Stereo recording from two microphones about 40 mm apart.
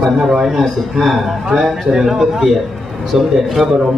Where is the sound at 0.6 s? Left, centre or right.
Centre.